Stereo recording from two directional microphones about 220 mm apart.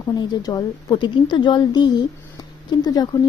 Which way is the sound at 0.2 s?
20° left (ahead or behind).